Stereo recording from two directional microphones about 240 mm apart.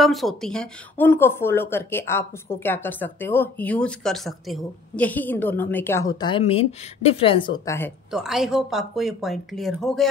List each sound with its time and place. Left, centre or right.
0.0 s speech: centre; by 7.5 s left
7.6 s speech: centre
8.1 s speech: centre